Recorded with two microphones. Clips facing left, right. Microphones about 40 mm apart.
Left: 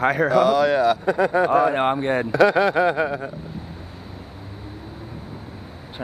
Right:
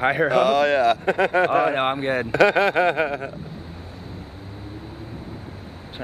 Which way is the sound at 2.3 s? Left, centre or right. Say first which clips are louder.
Even; right.